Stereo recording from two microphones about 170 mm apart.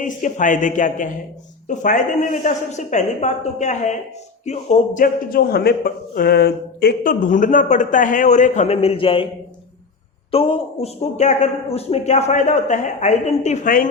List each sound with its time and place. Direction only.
0.0 s a man's voice: 50° left (ahead or behind)
5.0 s a man's voice: 60° left (ahead or behind); by 9.3 s 30° left (ahead or behind)
10.3 s a man's voice: 35° left (ahead or behind); by 13.9 s 50° left (ahead or behind)